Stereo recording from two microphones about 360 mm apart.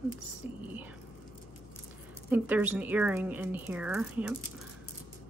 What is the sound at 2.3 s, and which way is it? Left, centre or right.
Speech, centre.